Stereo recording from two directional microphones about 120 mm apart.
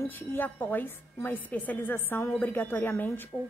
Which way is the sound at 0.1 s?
15° left (ahead or behind).